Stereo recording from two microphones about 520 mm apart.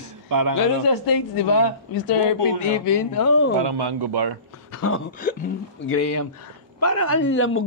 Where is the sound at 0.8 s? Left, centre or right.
Left.